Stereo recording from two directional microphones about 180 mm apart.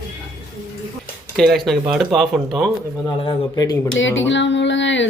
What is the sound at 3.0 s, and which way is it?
Speech, 30° left (ahead or behind).